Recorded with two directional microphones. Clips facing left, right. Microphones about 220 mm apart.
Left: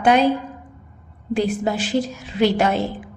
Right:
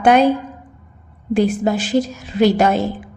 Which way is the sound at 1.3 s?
45° right (ahead or behind).